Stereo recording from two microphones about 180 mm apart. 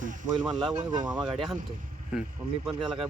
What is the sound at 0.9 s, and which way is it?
Speech, 25° right (ahead or behind).